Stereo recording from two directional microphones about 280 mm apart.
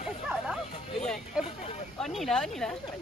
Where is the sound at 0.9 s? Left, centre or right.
Centre.